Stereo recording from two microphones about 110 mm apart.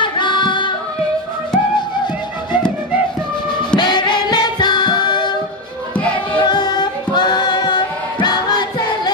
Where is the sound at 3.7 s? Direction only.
45° left (ahead or behind).